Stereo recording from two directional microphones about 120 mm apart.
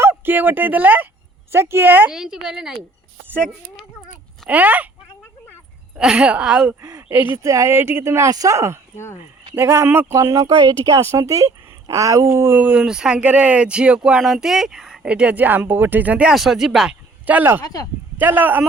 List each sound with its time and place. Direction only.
0.0 s speech: 15° right (ahead or behind)
2.1 s speech: 5° right (ahead or behind)
3.2 s speech: 15° right (ahead or behind)
6.0 s speech: 10° right (ahead or behind)
17.2 s speech: 15° right (ahead or behind)
17.6 s speech: 30° left (ahead or behind)
18.2 s speech: 15° right (ahead or behind)